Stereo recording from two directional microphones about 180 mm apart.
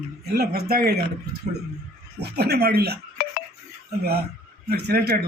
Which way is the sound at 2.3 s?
60° right (ahead or behind).